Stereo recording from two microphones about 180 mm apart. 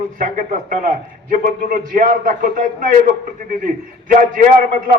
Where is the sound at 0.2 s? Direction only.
45° right (ahead or behind).